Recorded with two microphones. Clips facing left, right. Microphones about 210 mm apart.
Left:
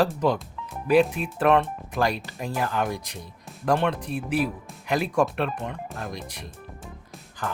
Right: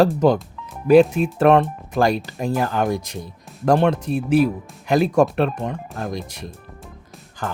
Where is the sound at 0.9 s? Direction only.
40° right (ahead or behind).